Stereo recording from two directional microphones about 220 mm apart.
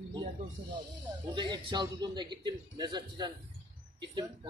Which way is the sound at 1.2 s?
20° right (ahead or behind).